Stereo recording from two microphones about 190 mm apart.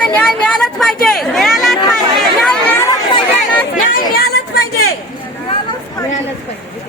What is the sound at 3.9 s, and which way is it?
Chatter, 55° left (ahead or behind).